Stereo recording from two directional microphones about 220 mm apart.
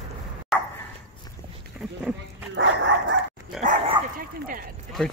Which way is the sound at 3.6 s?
35° right (ahead or behind).